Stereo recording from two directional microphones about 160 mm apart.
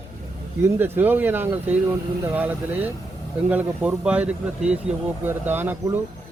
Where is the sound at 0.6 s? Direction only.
15° right (ahead or behind).